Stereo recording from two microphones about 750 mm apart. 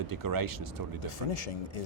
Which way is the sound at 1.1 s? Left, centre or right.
Left.